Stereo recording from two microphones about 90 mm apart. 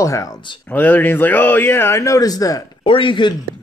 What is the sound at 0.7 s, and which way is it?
Speech, 20° left (ahead or behind).